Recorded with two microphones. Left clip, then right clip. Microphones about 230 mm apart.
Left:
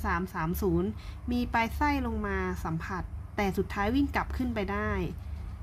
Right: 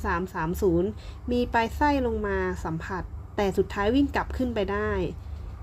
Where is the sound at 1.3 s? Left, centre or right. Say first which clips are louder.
Right 5 dB; centre.